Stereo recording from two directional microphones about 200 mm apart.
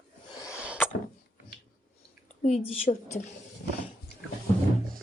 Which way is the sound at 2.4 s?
35° left (ahead or behind).